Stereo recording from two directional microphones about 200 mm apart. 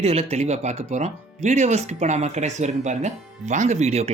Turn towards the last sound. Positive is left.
turn(degrees=-30)  # may be behind; listen again after turning